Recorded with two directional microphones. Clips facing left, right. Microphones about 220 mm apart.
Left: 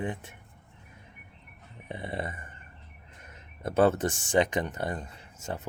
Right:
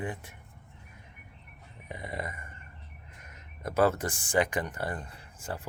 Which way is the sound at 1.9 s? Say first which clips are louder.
Left 3 dB; 30° left (ahead or behind).